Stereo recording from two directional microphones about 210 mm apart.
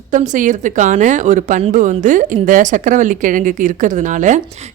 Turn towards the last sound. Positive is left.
turn(degrees=-35)  # may be behind; listen again after turning